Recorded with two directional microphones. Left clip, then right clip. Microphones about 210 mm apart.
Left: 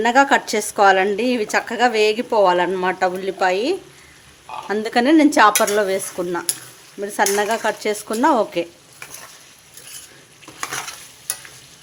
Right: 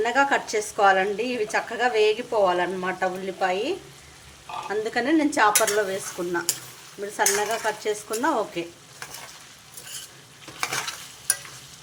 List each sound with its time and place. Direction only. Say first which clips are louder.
0.0 s a woman's voice: left 7 dB; 55° left (ahead or behind)